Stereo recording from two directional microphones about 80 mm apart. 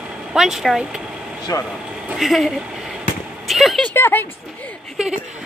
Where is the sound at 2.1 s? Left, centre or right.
Centre.